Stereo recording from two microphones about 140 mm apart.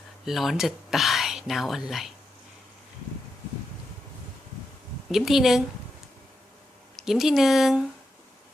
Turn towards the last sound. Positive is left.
turn(degrees=-5)  # may be behind; listen again after turning